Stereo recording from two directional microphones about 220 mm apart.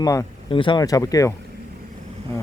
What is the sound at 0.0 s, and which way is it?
Speech, 15° left (ahead or behind).